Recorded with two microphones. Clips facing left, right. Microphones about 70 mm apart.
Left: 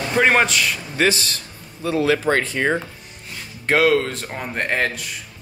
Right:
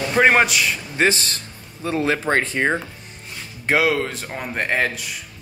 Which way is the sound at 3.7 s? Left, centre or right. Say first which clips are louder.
Left 2 dB; centre.